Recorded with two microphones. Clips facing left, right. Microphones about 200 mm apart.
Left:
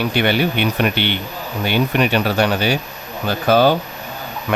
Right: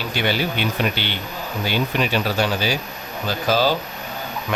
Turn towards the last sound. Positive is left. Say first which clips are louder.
# left 5 dB
turn(degrees=60)  # may be behind; listen again after turning